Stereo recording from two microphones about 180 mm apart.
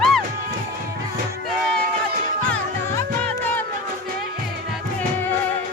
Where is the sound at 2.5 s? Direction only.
10° left (ahead or behind).